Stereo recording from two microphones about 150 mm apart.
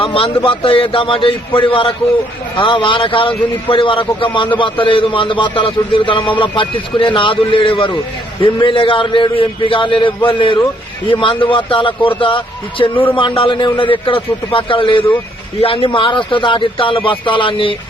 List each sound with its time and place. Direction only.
0.0 s a man's voice: 35° left (ahead or behind)